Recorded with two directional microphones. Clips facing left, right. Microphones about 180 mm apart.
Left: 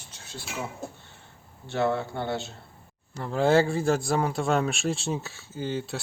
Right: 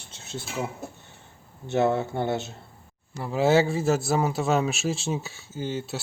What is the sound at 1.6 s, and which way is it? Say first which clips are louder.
Speech: right 3 dB; 20° right (ahead or behind).